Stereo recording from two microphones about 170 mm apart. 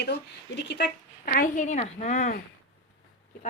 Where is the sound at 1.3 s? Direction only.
50° left (ahead or behind).